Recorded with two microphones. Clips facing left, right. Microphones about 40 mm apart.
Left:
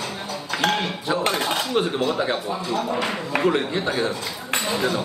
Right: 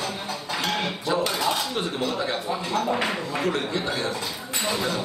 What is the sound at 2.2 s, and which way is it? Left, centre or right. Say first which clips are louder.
Speech: left 3 dB; centre.